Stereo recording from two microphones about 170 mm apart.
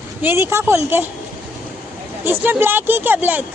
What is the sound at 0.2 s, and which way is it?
Speech, 15° right (ahead or behind).